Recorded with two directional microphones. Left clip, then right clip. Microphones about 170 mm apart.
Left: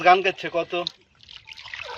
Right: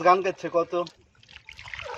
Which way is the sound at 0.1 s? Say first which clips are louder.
Left 5 dB; 60° right (ahead or behind).